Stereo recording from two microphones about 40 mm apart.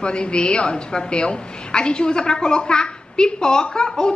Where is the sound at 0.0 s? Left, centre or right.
Left.